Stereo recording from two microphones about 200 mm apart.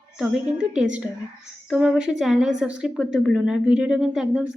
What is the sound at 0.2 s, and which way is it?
A woman's voice, 5° right (ahead or behind).